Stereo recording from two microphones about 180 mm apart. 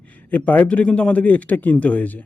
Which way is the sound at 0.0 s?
10° left (ahead or behind).